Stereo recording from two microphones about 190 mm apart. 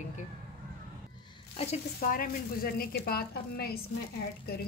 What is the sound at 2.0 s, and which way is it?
A woman's voice, 45° left (ahead or behind).